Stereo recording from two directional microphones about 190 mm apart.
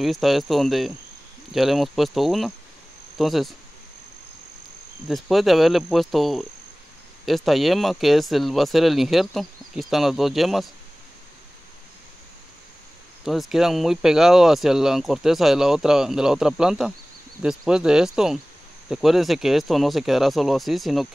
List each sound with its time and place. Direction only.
0.0 s speech: centre (ahead or behind)
5.0 s speech: centre (ahead or behind)
13.2 s speech: centre (ahead or behind)